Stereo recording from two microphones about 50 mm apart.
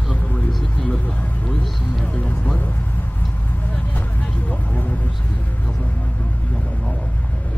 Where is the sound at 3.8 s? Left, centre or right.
Left.